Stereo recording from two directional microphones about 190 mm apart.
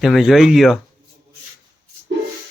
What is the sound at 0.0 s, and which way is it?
Speech, centre (ahead or behind).